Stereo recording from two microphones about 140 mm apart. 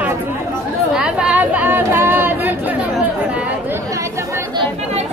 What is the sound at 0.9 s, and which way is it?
Speech, 5° right (ahead or behind).